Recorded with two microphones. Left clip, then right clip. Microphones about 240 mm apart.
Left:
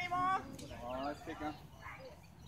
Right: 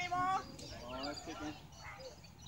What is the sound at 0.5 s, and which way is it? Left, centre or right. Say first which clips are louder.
Chicken: left 3 dB; left.